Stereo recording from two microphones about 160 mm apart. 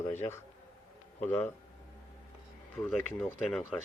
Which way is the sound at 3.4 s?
5° left (ahead or behind).